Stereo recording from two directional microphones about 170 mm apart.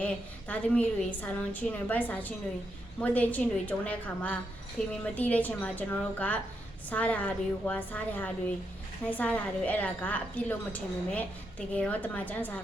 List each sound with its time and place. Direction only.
0.0 s a woman's voice: 10° left (ahead or behind)